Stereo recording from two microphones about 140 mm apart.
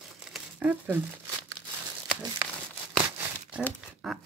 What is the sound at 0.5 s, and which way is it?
Speech, 10° right (ahead or behind).